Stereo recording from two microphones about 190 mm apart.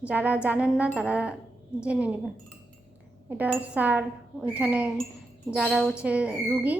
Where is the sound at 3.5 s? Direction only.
10° right (ahead or behind).